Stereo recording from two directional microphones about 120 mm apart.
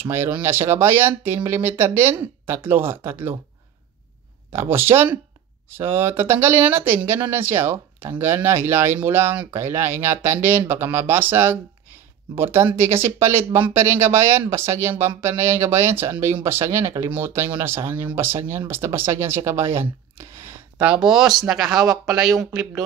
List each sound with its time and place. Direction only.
0.0 s speech: 20° right (ahead or behind)
4.5 s speech: 20° right (ahead or behind)
20.8 s speech: 5° right (ahead or behind)